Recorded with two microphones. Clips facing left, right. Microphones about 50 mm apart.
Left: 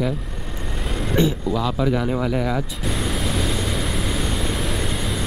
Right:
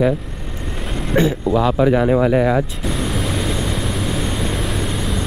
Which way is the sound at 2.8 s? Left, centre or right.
Centre.